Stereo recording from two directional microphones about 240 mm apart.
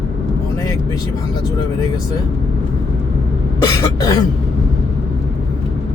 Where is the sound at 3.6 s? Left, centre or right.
Centre.